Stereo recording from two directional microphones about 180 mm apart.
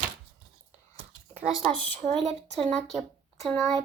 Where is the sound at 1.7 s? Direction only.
5° left (ahead or behind).